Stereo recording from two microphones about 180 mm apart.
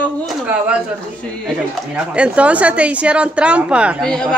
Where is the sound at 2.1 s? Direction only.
5° right (ahead or behind).